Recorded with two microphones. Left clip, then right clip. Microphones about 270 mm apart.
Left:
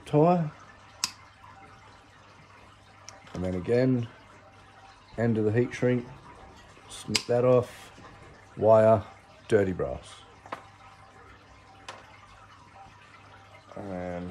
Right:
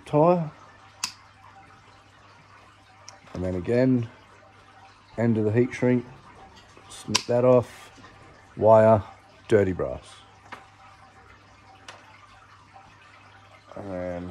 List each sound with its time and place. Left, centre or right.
0.0 s speech: centre
3.5 s speech: centre
5.1 s speech: centre
13.8 s speech: centre